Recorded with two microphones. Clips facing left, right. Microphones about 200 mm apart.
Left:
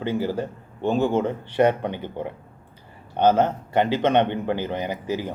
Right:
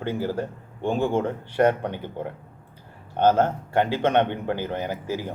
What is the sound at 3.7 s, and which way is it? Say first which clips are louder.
Speech: left 2 dB; 10° right (ahead or behind).